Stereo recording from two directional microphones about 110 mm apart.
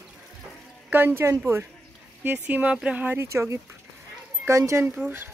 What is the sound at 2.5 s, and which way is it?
Speech, 15° right (ahead or behind).